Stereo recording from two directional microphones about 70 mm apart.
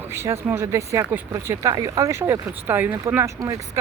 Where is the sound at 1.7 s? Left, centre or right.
Right.